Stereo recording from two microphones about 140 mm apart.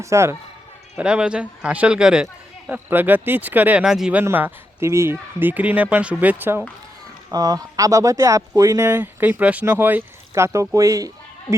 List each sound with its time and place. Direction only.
0.0 s speech: 20° right (ahead or behind)
0.9 s a man's voice: 5° right (ahead or behind)
4.2 s a man's voice: 15° right (ahead or behind)
7.3 s speech: 25° right (ahead or behind)